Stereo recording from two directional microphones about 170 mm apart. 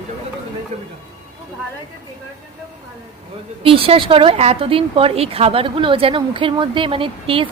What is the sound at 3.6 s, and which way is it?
Speech, 30° right (ahead or behind).